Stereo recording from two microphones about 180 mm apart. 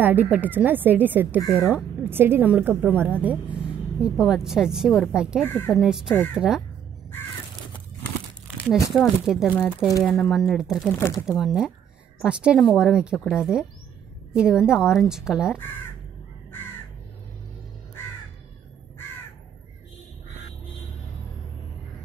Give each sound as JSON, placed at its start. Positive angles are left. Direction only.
{"t": 0.0, "sound": "a woman's voice", "side_deg": -10}
{"t": 2.0, "sound": "a woman's voice", "side_deg": -10}
{"t": 5.4, "sound": "speech", "side_deg": 10}
{"t": 5.7, "sound": "speech", "side_deg": -5}
{"t": 8.6, "sound": "speech", "side_deg": 15}
{"t": 8.9, "sound": "speech", "side_deg": 0}
{"t": 11.0, "sound": "speech", "side_deg": 15}
{"t": 11.2, "sound": "speech", "side_deg": 0}